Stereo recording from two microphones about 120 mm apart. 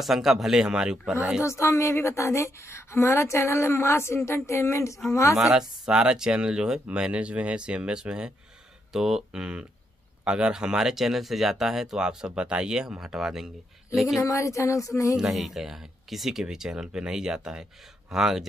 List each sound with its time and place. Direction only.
0.0 s speech: centre (ahead or behind)
1.4 s a woman's voice: 25° left (ahead or behind)
5.4 s speech: 5° right (ahead or behind)
14.2 s a woman's voice: 25° left (ahead or behind)
15.1 s speech: centre (ahead or behind)